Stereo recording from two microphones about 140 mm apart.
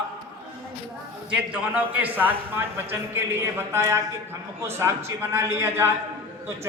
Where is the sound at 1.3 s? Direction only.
10° right (ahead or behind).